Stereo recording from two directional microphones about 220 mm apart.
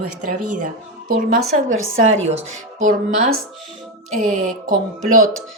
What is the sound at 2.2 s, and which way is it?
Speech, 30° right (ahead or behind).